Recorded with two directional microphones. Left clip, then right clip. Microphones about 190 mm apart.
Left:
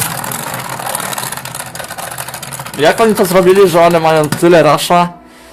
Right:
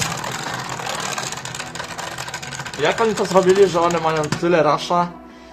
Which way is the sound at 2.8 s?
40° left (ahead or behind).